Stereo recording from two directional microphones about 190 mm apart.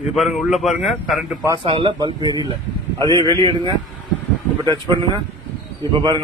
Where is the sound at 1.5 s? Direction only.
25° right (ahead or behind).